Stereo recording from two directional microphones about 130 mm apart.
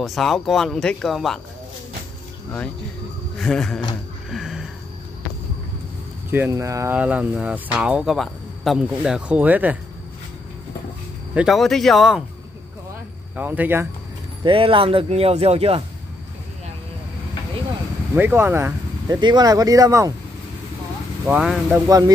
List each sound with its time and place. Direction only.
0.0 s speech: centre (ahead or behind)
3.3 s speech: 5° left (ahead or behind)
4.3 s a sound: centre (ahead or behind)
6.5 s speech: 25° right (ahead or behind)
7.0 s speech: 10° right (ahead or behind)
11.3 s speech: centre (ahead or behind)
13.4 s speech: 15° right (ahead or behind)
14.4 s speech: 40° right (ahead or behind)
18.1 s speech: 15° right (ahead or behind)
19.0 s speech: 35° right (ahead or behind)
21.3 s speech: 10° right (ahead or behind)
21.7 s speech: 25° right (ahead or behind)